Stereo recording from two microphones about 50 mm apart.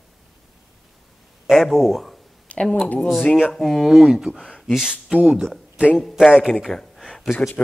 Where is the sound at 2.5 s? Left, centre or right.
Left.